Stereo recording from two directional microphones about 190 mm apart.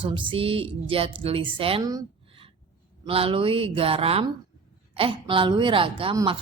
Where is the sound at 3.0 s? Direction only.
30° right (ahead or behind).